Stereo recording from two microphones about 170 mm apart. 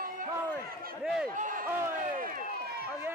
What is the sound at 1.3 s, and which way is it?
Speech, 50° right (ahead or behind).